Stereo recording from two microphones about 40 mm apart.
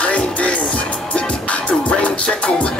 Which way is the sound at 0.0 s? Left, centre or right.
Left.